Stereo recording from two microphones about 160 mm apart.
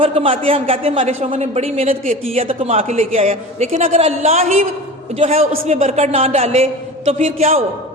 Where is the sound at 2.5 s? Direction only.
40° right (ahead or behind).